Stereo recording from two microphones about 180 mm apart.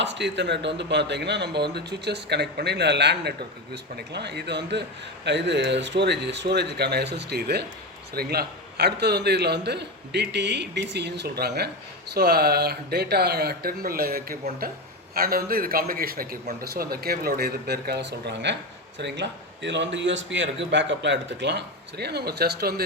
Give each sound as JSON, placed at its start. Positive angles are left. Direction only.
{"t": 0.0, "sound": "a man's voice", "side_deg": -75}